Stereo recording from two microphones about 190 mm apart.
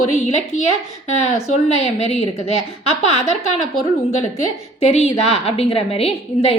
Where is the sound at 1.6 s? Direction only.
35° left (ahead or behind).